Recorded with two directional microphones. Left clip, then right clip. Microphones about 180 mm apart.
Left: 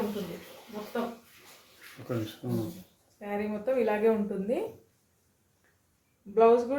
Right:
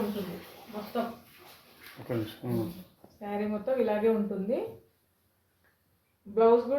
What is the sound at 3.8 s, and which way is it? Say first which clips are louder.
Speech: left 1 dB; 30° left (ahead or behind).